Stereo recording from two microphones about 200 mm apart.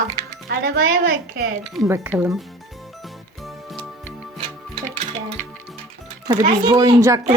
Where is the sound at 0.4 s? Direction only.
50° right (ahead or behind).